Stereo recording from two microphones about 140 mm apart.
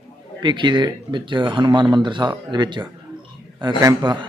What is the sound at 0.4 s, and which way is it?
Speech, 35° right (ahead or behind).